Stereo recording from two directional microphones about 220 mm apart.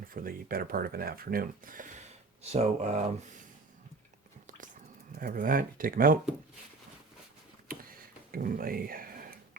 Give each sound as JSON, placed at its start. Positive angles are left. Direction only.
{"t": 0.1, "sound": "speech", "side_deg": -40}
{"t": 5.1, "sound": "speech", "side_deg": -40}
{"t": 8.3, "sound": "speech", "side_deg": -40}